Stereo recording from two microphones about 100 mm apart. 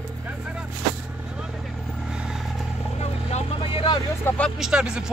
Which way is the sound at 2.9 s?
80° left.